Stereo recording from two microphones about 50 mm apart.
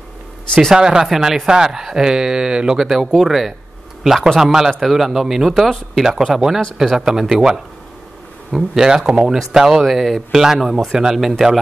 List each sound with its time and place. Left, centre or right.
0.7 s speech: centre
1.0 s speech: centre
8.8 s speech: centre